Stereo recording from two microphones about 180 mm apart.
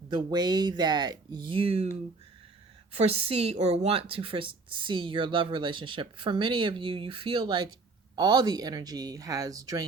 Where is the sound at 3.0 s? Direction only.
35° right (ahead or behind).